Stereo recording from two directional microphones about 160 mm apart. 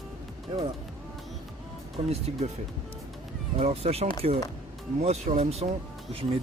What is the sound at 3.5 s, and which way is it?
Speech, 40° right (ahead or behind).